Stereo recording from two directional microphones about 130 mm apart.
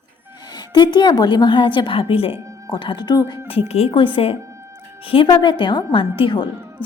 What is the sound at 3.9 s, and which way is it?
A woman's voice, 40° left (ahead or behind).